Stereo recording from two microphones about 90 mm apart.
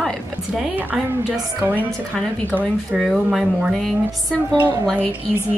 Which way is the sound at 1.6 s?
20° right (ahead or behind).